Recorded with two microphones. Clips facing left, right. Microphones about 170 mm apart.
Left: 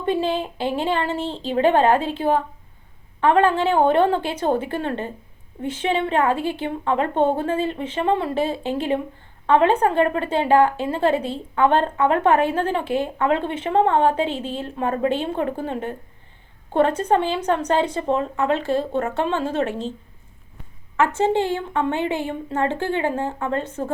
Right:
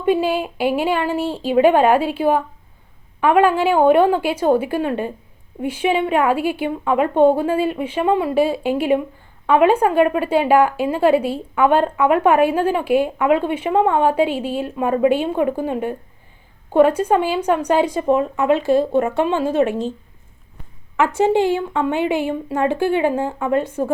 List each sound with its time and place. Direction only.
0.0 s speech: 10° right (ahead or behind)
20.9 s speech: 15° right (ahead or behind)